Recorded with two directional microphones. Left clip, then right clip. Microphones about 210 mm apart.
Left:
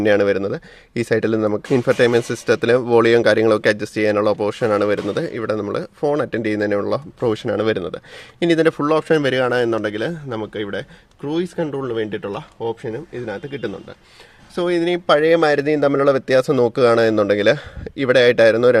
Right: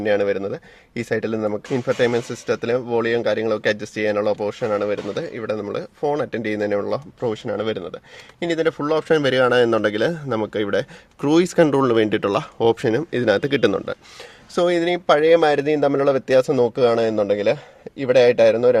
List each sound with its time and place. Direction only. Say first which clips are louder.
0.0 s speech: left 4 dB; 25° left (ahead or behind); by 10.8 s 15° right (ahead or behind)
11.2 s speech: right 7 dB; 35° right (ahead or behind)
14.5 s speech: right 2 dB; 10° right (ahead or behind)
14.8 s a man's voice: left 4 dB; centre (ahead or behind); by 18.8 s 20° left (ahead or behind)